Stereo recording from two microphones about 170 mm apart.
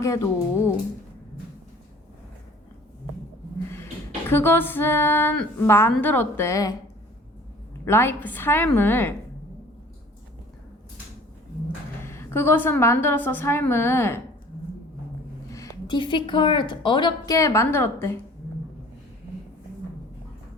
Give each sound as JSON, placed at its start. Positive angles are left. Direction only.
{"t": 0.0, "sound": "a woman's voice", "side_deg": 20}
{"t": 4.3, "sound": "a woman's voice", "side_deg": 15}
{"t": 7.9, "sound": "a woman's voice", "side_deg": 15}
{"t": 12.0, "sound": "a woman's voice", "side_deg": 15}
{"t": 15.5, "sound": "a woman's voice", "side_deg": 20}